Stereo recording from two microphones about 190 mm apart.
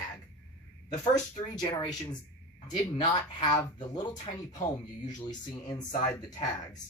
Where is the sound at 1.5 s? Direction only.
20° left (ahead or behind).